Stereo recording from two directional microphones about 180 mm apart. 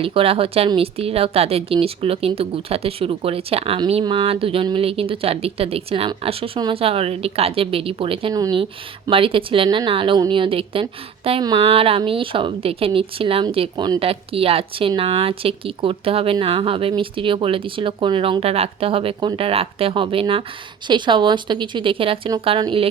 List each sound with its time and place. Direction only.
0.0 s a woman's voice: 30° right (ahead or behind)